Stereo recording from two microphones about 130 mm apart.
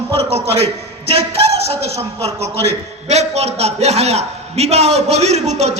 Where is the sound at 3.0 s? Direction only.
60° right (ahead or behind).